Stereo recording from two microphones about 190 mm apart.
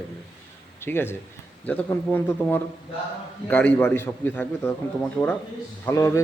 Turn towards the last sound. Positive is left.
turn(degrees=15)  # may be behind; listen again after turning